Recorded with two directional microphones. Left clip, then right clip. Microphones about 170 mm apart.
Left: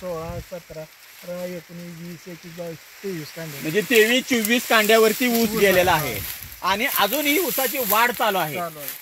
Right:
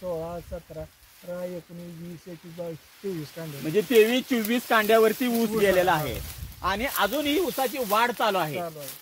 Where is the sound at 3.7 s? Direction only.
25° left (ahead or behind).